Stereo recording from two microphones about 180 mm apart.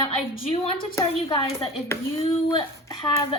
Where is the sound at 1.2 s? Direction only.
30° left (ahead or behind).